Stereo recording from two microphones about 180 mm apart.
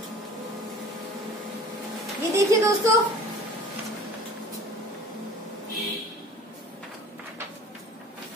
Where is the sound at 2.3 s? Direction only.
15° right (ahead or behind).